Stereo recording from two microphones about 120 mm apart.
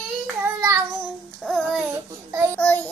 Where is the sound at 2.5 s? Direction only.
15° left (ahead or behind).